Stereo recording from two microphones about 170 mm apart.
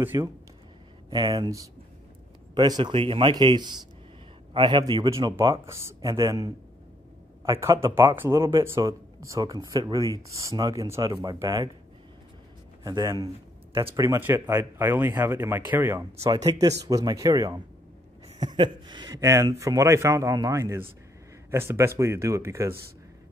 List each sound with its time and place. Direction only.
0.0 s speech: 15° right (ahead or behind)
1.1 s speech: 25° right (ahead or behind)
12.8 s speech: 20° right (ahead or behind)
18.6 s speech: 25° right (ahead or behind)